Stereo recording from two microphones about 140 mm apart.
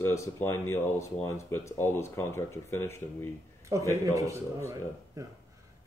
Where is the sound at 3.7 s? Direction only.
25° right (ahead or behind).